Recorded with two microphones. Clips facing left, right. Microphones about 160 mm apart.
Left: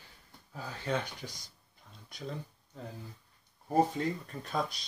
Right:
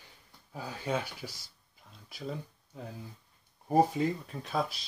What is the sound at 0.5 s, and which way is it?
Speech, 10° right (ahead or behind).